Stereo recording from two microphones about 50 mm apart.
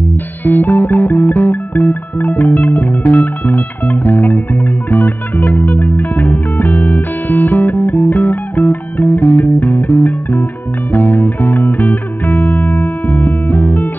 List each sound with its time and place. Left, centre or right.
0.4 s music: left